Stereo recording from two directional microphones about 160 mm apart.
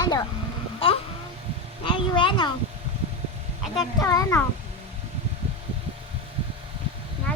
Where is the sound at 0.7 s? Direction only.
35° left (ahead or behind).